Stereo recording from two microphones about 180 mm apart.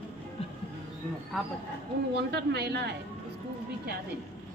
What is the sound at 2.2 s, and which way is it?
Speech, 65° right (ahead or behind).